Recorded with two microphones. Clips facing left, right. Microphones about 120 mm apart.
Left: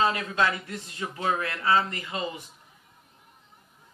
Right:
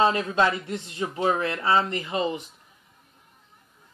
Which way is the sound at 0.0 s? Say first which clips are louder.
Right 4 dB; 25° right (ahead or behind).